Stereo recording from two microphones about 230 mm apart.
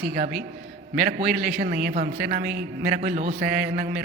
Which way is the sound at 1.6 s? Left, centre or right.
Right.